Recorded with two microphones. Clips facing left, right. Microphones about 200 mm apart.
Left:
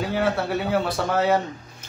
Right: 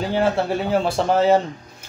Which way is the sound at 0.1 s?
30° right (ahead or behind).